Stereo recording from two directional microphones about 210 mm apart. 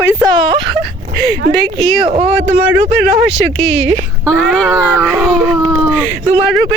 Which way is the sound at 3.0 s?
5° right (ahead or behind).